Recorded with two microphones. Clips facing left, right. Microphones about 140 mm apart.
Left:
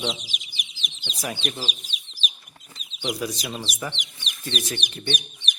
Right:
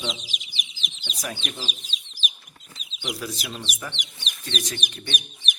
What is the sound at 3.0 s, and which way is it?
Speech, 20° left (ahead or behind).